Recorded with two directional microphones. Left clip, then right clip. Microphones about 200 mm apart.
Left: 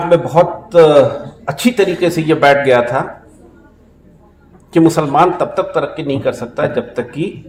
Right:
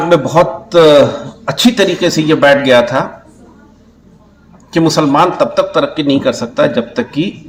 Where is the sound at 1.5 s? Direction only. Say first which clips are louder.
Right 3 dB; 15° left (ahead or behind).